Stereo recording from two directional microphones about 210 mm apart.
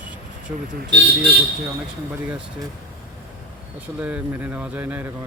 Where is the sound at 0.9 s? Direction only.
55° right (ahead or behind).